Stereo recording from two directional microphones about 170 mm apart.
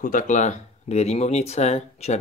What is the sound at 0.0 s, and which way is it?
Speech, 50° left (ahead or behind).